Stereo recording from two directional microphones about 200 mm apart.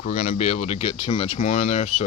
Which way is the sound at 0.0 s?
40° left (ahead or behind).